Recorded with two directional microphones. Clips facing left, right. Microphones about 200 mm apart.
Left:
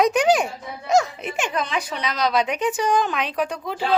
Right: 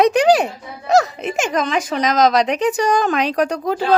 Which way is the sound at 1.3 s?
90° right.